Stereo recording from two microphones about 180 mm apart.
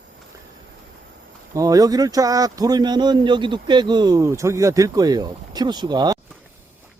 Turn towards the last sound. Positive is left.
turn(degrees=-20)  # may be behind; listen again after turning